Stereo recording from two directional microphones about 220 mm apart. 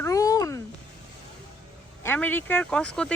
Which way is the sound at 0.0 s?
15° left (ahead or behind).